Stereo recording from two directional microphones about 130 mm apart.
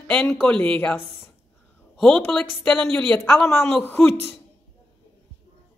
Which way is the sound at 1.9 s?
5° left (ahead or behind).